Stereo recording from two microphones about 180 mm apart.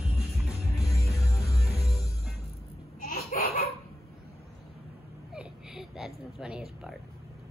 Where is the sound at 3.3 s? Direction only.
50° left (ahead or behind).